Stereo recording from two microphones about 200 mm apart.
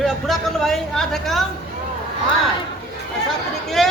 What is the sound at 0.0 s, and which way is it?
Speech, centre (ahead or behind).